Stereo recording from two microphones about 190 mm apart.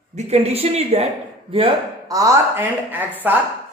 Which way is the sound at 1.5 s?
30° right (ahead or behind).